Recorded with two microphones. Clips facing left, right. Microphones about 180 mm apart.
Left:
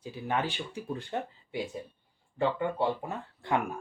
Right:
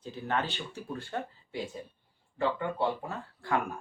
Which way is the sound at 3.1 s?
20° left (ahead or behind).